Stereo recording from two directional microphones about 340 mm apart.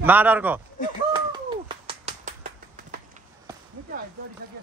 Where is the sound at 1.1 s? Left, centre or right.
Centre.